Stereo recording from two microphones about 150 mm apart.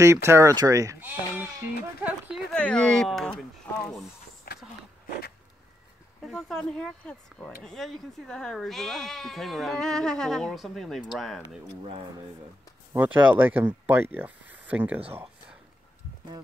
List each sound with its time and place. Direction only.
0.0 s speech: 20° right (ahead or behind)
2.5 s speech: 5° left (ahead or behind)
3.7 s a sound: 10° left (ahead or behind)
4.5 s a sound: 90° left
6.2 s speech: 5° left (ahead or behind)
12.9 s speech: 10° right (ahead or behind)